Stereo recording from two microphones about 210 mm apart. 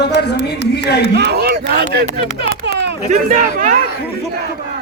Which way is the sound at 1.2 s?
50° right (ahead or behind).